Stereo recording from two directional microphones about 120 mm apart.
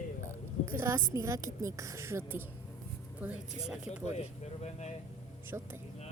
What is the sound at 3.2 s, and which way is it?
Speech, 10° right (ahead or behind).